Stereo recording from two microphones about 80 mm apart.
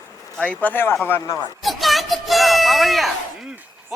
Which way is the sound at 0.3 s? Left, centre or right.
Centre.